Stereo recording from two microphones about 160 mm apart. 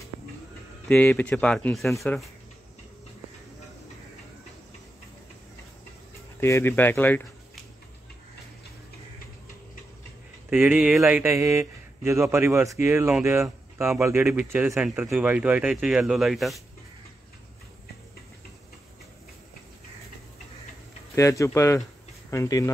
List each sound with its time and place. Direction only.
0.8 s speech: 5° left (ahead or behind)
6.4 s speech: 15° left (ahead or behind)
10.5 s speech: 10° right (ahead or behind)
21.1 s speech: 20° left (ahead or behind)